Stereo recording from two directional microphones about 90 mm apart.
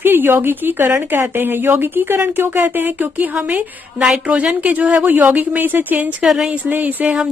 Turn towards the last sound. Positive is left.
turn(degrees=-20)  # may be behind; listen again after turning